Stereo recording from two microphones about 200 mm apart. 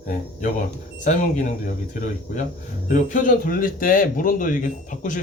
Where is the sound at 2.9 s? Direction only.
40° left (ahead or behind).